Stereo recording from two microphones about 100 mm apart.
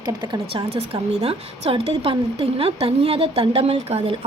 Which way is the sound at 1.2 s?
80° right.